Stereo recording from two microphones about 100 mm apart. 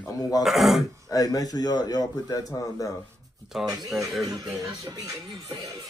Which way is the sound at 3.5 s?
5° right (ahead or behind).